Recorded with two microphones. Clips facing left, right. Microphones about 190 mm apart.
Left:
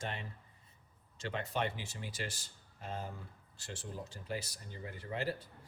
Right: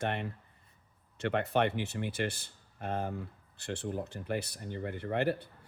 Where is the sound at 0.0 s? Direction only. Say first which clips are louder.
Right 8 dB; 60° right (ahead or behind).